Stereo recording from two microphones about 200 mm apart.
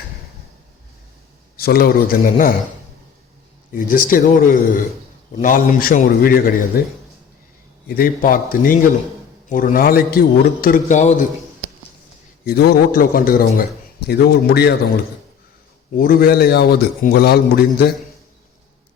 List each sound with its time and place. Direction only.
1.5 s a man's voice: 50° left (ahead or behind)
3.8 s a man's voice: 40° left (ahead or behind)
12.5 s a man's voice: 50° left (ahead or behind)
16.0 s a man's voice: 45° left (ahead or behind)